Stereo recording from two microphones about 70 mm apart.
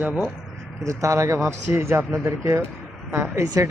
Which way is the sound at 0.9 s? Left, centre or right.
Right.